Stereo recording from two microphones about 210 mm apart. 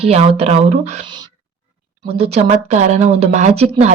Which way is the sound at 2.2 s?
30° right (ahead or behind).